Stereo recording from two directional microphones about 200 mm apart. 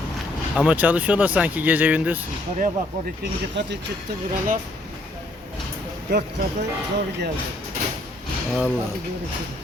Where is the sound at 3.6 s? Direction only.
60° right (ahead or behind).